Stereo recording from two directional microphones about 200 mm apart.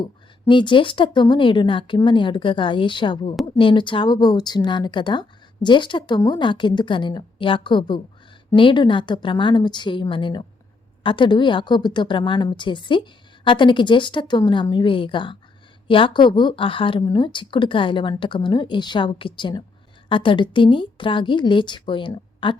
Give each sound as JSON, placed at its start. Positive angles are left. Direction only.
{"t": 0.0, "sound": "a woman's voice", "side_deg": 25}